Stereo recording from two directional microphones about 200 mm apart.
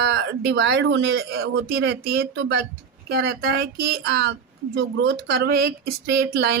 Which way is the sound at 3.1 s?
50° right (ahead or behind).